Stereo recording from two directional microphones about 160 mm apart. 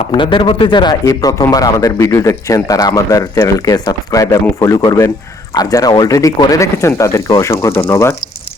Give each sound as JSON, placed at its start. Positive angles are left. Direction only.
{"t": 0.1, "sound": "speech", "side_deg": 30}